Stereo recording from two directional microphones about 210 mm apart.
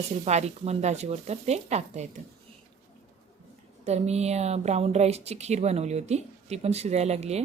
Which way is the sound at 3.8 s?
30° right (ahead or behind).